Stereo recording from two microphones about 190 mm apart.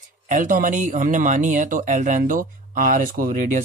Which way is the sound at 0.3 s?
45° right (ahead or behind).